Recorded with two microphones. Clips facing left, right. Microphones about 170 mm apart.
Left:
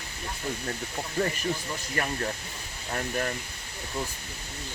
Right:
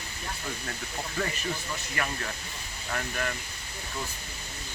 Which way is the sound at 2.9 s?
35° left (ahead or behind).